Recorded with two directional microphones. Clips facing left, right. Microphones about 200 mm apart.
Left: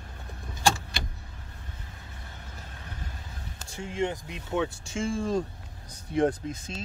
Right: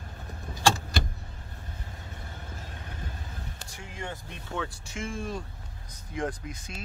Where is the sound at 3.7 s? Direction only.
25° left (ahead or behind).